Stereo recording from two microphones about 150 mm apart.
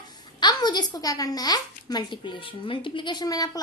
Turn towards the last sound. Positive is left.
turn(degrees=25)  # may be behind; listen again after turning